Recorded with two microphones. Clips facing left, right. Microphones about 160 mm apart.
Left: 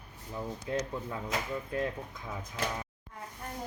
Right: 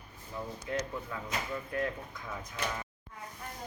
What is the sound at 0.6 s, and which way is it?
Speech, 25° left (ahead or behind).